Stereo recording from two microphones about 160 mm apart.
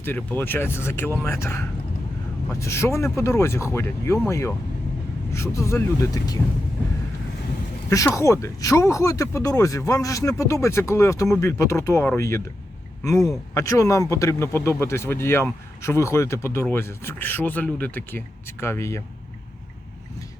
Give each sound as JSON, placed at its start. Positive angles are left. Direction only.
{"t": 0.0, "sound": "a man's voice", "side_deg": 10}
{"t": 7.9, "sound": "speech", "side_deg": 20}
{"t": 13.5, "sound": "a man's voice", "side_deg": 20}